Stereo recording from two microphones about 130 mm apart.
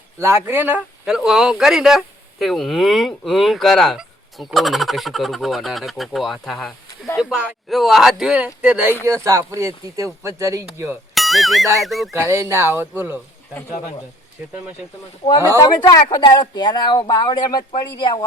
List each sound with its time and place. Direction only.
0.2 s speech: 20° right (ahead or behind)
9.0 s speech: 25° right (ahead or behind)
11.1 s music: centre (ahead or behind)
11.8 s speech: centre (ahead or behind)
12.1 s speech: 20° right (ahead or behind)
15.4 s speech: 20° right (ahead or behind)
15.6 s speech: 35° left (ahead or behind)